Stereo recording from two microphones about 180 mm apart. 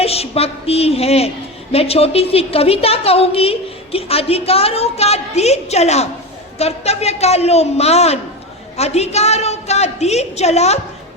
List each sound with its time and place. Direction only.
0.0 s a woman's voice: 35° left (ahead or behind)